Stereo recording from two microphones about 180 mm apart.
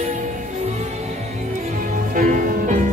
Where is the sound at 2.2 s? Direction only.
45° right (ahead or behind).